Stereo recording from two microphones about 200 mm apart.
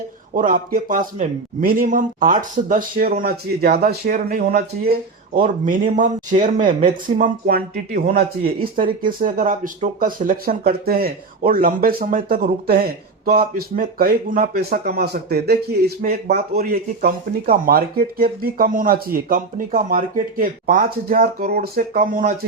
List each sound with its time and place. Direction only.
0.3 s speech: 45° right (ahead or behind)